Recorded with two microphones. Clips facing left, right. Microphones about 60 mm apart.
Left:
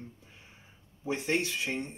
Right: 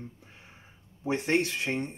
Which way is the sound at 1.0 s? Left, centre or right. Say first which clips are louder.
Right 4 dB; right.